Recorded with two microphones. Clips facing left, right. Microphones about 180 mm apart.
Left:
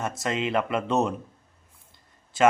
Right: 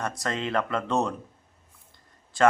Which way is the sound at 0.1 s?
20° left (ahead or behind).